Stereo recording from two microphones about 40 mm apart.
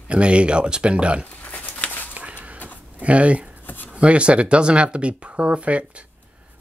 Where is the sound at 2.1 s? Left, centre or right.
Right.